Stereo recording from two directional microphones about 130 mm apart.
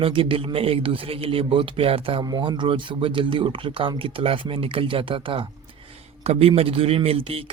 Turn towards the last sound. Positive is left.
turn(degrees=-50)  # may be behind; listen again after turning